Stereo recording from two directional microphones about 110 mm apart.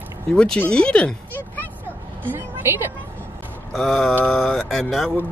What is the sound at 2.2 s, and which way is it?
Speech, 20° right (ahead or behind).